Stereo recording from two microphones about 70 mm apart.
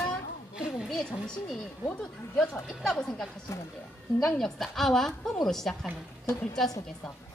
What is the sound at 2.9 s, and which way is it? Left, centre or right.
Speech, centre.